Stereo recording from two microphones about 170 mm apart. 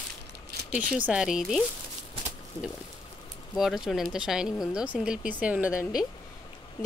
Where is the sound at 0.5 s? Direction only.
70° right (ahead or behind).